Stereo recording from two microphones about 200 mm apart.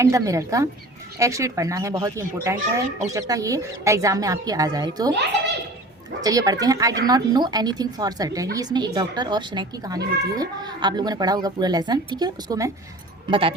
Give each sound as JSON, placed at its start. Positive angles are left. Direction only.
{"t": 0.0, "sound": "speech", "side_deg": -15}
{"t": 6.2, "sound": "a child's voice", "side_deg": -15}